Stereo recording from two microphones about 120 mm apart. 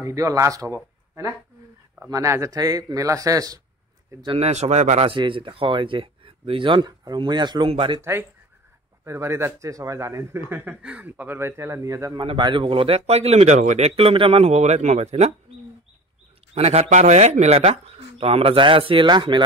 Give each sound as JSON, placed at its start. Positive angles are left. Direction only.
{"t": 0.0, "sound": "speech", "side_deg": -30}
{"t": 2.0, "sound": "speech", "side_deg": -25}
{"t": 4.4, "sound": "speech", "side_deg": -70}
{"t": 5.1, "sound": "speech", "side_deg": -45}
{"t": 8.0, "sound": "speech", "side_deg": -20}
{"t": 12.2, "sound": "speech", "side_deg": -40}
{"t": 16.5, "sound": "speech", "side_deg": -60}
{"t": 16.9, "sound": "speech", "side_deg": -75}